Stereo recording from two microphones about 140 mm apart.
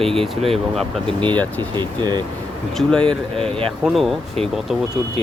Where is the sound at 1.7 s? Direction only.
30° right (ahead or behind).